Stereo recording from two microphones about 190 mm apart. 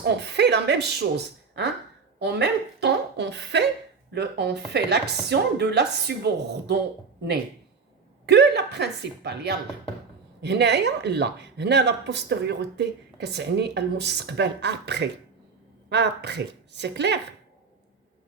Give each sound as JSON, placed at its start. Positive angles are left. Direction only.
{"t": 0.0, "sound": "speech", "side_deg": -60}
{"t": 8.3, "sound": "speech", "side_deg": -60}